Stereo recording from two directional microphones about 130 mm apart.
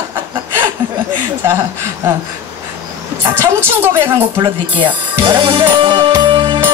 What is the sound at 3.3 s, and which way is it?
Speech, 20° right (ahead or behind).